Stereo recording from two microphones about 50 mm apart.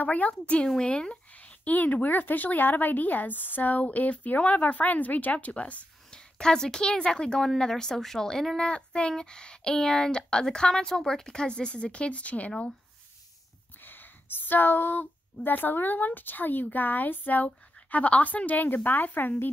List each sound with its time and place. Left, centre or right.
0.0 s speech: left
6.0 s speech: centre
13.8 s speech: left